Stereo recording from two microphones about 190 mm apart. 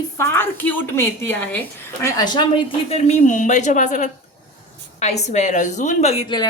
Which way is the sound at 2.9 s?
35° left (ahead or behind).